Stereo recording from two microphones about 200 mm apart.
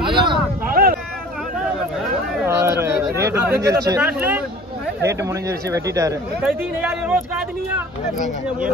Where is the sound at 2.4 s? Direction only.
15° right (ahead or behind).